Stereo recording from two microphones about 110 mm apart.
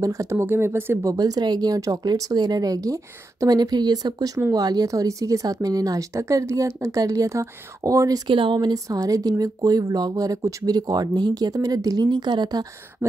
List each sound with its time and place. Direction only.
0.0 s speech: 30° right (ahead or behind)
1.1 s speech: 35° right (ahead or behind)
8.3 s speech: 50° right (ahead or behind)